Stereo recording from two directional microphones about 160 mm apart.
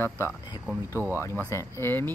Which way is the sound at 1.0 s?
15° right (ahead or behind).